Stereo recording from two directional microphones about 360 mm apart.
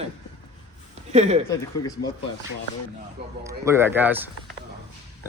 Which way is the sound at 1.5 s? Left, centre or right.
Centre.